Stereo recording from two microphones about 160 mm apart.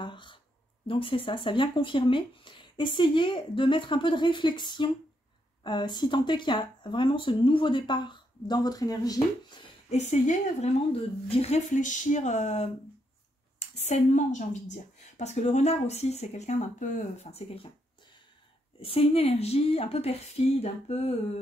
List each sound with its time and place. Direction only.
0.0 s speech: 30° left (ahead or behind)
9.8 s a woman's voice: 45° left (ahead or behind)
18.8 s speech: 35° left (ahead or behind)